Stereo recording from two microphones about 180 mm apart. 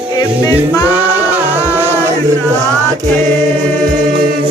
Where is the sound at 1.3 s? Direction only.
10° right (ahead or behind).